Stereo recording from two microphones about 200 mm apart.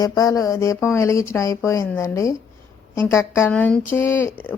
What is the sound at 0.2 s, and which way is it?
A woman's voice, 15° left (ahead or behind).